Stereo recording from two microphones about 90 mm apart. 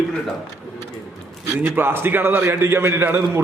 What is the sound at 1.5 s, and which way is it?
A man's voice, 30° right (ahead or behind).